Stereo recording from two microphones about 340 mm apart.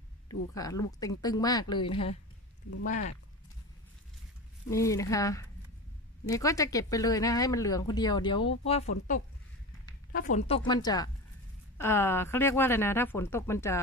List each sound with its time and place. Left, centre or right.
0.3 s speech: centre
4.6 s speech: centre